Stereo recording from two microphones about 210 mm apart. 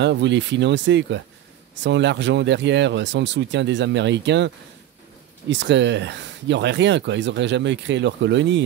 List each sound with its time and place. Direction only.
0.0 s speech: 55° right (ahead or behind)
5.5 s speech: 60° right (ahead or behind)